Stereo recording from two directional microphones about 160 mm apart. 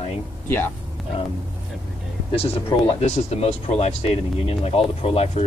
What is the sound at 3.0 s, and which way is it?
Speech, 40° left (ahead or behind).